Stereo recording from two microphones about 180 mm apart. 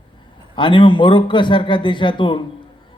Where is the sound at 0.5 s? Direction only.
25° left (ahead or behind).